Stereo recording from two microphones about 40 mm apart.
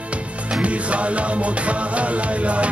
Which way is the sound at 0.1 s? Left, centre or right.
Right.